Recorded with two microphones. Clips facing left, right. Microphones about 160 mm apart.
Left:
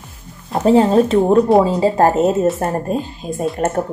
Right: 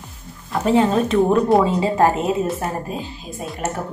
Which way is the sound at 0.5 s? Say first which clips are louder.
Left 4 dB; 35° left (ahead or behind).